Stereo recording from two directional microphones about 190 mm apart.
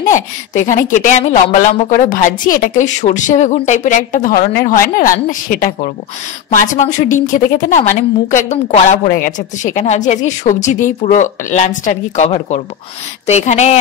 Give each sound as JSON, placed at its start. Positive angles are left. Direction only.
{"t": 0.7, "sound": "a woman's voice", "side_deg": 40}